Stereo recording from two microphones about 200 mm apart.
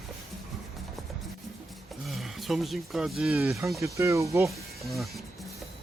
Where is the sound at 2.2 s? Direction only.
Centre (ahead or behind).